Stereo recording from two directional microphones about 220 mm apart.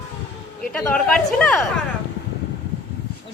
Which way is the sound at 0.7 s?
5° left (ahead or behind).